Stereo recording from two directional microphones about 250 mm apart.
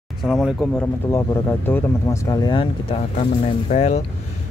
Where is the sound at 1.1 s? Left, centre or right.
Centre.